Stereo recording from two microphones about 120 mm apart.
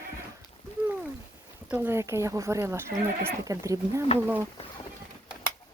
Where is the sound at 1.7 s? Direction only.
20° right (ahead or behind).